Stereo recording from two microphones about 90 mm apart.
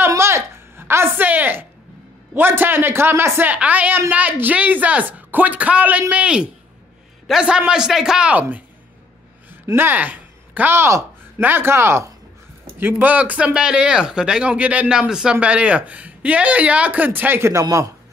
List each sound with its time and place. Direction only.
0.1 s a sound: 30° right (ahead or behind)
2.3 s a woman's voice: 25° right (ahead or behind)
9.8 s a woman's voice: 20° right (ahead or behind)
12.8 s speech: 20° right (ahead or behind); by 17.9 s 40° right (ahead or behind)